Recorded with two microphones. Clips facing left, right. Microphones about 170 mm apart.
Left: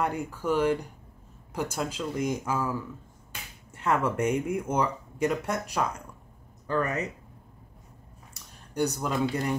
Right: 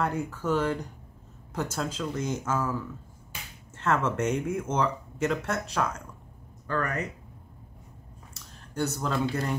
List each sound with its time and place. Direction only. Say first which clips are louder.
0.0 s speech: even; 15° left (ahead or behind)
8.3 s speech: right 1 dB; 15° left (ahead or behind)